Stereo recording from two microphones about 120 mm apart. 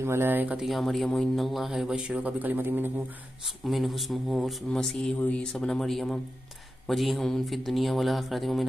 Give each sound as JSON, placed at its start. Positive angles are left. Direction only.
{"t": 0.0, "sound": "speech", "side_deg": -20}
{"t": 0.6, "sound": "a man's voice", "side_deg": 0}
{"t": 3.4, "sound": "a man's voice", "side_deg": 0}